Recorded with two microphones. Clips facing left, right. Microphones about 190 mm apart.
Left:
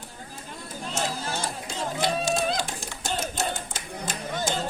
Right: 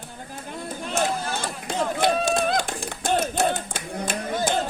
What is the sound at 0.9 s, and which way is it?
Run, 60° right (ahead or behind).